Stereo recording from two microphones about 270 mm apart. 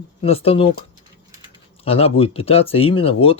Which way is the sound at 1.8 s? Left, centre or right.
Left.